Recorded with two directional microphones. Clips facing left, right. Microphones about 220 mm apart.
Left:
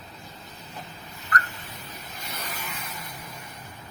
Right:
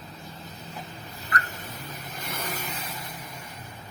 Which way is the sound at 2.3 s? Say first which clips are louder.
Right 3 dB; 50° right (ahead or behind).